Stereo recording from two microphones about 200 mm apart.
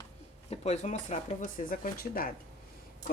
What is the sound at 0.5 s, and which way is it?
A woman's voice, 35° left (ahead or behind).